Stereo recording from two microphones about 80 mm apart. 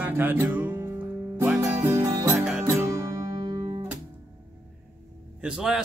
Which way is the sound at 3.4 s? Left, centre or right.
Right.